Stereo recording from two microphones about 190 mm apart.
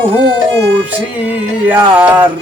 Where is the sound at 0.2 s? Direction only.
65° right (ahead or behind).